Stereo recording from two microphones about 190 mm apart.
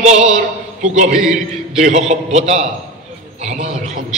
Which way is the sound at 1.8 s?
35° right (ahead or behind).